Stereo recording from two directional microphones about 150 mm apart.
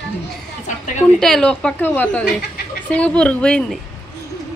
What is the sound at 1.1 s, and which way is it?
A woman's voice, 5° left (ahead or behind).